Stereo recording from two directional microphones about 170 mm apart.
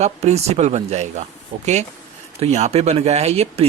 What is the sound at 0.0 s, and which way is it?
Speech, 40° right (ahead or behind).